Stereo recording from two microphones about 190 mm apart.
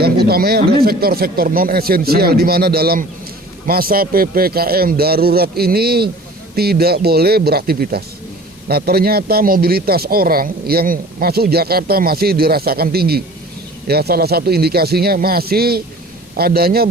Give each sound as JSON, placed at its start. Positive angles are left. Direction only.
{"t": 0.0, "sound": "a man's voice", "side_deg": -55}